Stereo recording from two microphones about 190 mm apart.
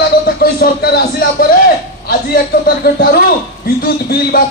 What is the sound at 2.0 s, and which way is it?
A man's voice, 50° left (ahead or behind).